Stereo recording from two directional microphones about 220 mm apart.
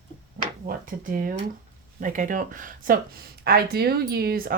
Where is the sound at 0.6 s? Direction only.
40° right (ahead or behind).